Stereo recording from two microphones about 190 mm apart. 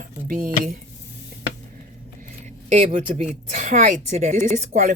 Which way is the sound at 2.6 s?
35° right (ahead or behind).